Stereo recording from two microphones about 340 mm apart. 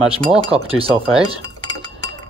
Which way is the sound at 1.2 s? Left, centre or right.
Centre.